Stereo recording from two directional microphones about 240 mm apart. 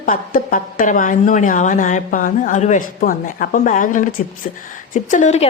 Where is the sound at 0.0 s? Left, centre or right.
Left.